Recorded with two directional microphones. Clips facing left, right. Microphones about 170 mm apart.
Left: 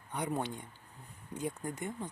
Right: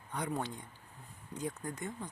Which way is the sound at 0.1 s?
20° left (ahead or behind).